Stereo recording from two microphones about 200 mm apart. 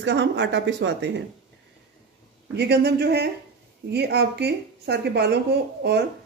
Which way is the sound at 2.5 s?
55° right (ahead or behind).